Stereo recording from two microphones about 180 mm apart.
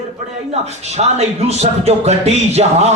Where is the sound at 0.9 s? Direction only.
35° right (ahead or behind).